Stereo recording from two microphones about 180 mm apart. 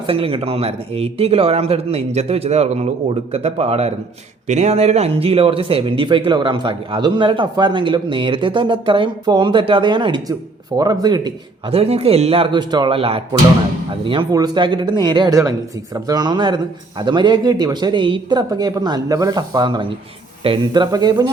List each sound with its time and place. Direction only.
0.1 s a man's voice: 30° right (ahead or behind)